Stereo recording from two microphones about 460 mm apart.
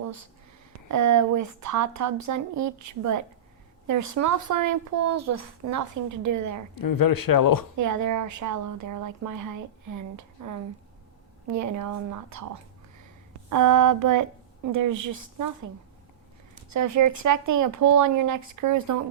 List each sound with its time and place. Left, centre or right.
0.9 s speech: right
6.7 s speech: left
7.8 s speech: right
11.4 s speech: right
13.5 s speech: right
16.7 s speech: right